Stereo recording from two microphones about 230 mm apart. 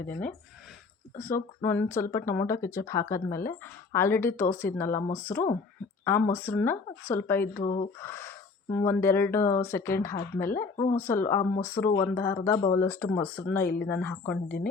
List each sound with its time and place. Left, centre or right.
0.0 s speech: centre
1.6 s speech: centre
7.6 s speech: left
7.9 s speech: centre